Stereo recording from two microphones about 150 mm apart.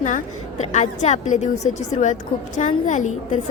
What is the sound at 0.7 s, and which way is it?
A woman's voice, 50° left (ahead or behind).